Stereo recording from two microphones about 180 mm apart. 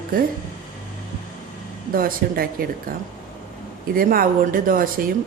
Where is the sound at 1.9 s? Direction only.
55° right (ahead or behind).